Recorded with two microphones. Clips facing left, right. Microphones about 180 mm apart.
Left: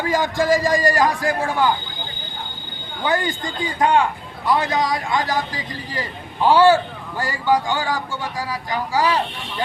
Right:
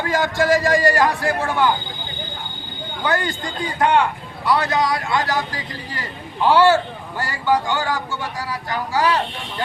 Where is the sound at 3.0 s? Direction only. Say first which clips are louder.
Left 1 dB; 20° left (ahead or behind).